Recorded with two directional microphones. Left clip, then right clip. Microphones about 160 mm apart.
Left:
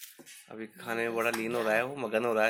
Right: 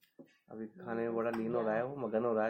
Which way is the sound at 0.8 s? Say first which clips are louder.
Left 5 dB; 30° left (ahead or behind).